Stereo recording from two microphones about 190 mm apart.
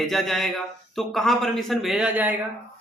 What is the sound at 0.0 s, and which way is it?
A man's voice, centre (ahead or behind).